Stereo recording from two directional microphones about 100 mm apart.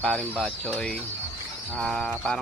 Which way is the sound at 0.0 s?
10° left (ahead or behind).